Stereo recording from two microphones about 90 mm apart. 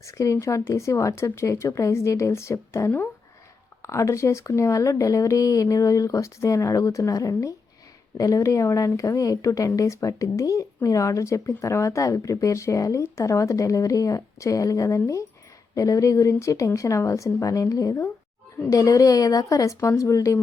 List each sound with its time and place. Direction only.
0.0 s speech: 35° left (ahead or behind)